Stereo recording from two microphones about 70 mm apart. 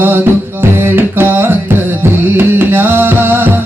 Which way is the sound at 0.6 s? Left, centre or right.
Right.